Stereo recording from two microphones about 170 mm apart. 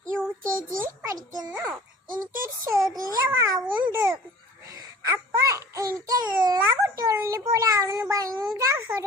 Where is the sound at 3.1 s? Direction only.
15° right (ahead or behind).